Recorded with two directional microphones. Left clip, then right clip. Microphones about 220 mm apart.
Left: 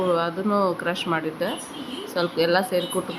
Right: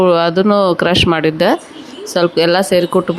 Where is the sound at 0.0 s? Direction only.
40° right (ahead or behind).